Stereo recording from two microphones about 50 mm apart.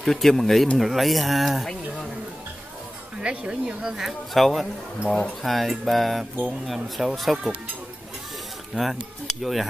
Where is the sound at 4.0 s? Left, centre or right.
Centre.